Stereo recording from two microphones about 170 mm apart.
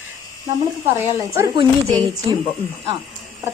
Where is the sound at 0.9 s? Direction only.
15° right (ahead or behind).